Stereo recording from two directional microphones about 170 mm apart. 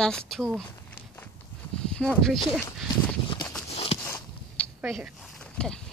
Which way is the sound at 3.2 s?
30° left (ahead or behind).